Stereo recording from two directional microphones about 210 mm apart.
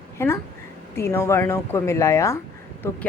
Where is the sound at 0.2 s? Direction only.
10° left (ahead or behind).